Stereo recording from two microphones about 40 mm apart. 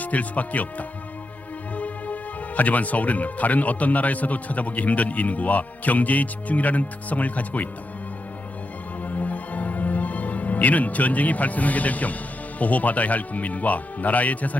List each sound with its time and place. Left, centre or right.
0.0 s speech: left
1.7 s music: left
2.6 s speech: left
9.0 s music: left
12.5 s speech: left